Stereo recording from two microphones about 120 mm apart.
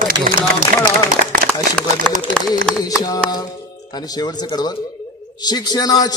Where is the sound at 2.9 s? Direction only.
30° left (ahead or behind).